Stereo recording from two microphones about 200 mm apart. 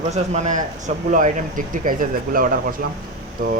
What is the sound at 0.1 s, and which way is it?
Speech, 35° right (ahead or behind).